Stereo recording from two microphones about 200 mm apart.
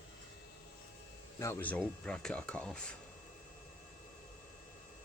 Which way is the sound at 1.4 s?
15° left (ahead or behind).